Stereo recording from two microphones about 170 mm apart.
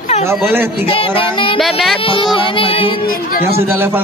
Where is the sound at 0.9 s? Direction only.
30° left (ahead or behind).